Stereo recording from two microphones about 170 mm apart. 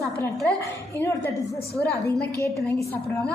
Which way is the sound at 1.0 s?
15° left (ahead or behind).